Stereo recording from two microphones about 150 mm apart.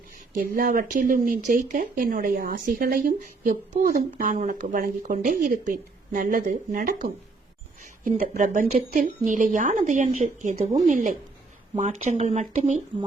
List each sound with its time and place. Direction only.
0.3 s speech: 65° right (ahead or behind)
8.2 s speech: 60° right (ahead or behind)